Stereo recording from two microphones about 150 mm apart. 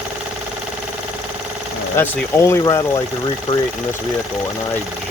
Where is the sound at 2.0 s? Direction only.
20° left (ahead or behind).